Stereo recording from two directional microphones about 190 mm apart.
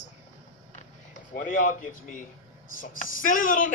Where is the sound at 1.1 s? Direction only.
45° left (ahead or behind).